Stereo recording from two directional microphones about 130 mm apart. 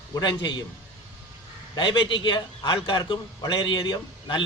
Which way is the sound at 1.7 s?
35° left (ahead or behind).